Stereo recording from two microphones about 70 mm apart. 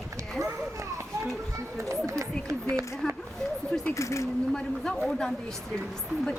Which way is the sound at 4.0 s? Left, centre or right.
Left.